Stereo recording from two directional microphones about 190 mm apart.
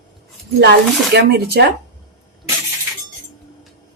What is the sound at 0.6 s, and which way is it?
A woman's voice, 60° right (ahead or behind).